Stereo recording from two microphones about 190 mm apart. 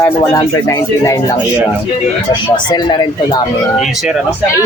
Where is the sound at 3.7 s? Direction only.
Centre (ahead or behind).